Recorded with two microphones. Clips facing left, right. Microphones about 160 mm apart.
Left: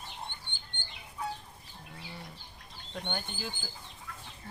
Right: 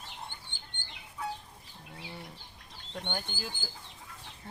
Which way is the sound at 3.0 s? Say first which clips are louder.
Even; centre (ahead or behind).